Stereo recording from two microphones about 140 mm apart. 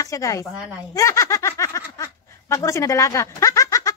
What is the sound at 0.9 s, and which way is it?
Snicker, 25° left (ahead or behind).